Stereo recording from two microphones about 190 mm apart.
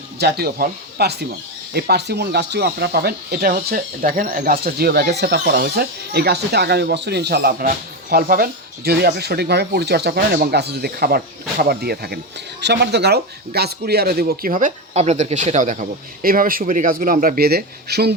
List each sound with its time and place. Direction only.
0.2 s speech: 60° right (ahead or behind)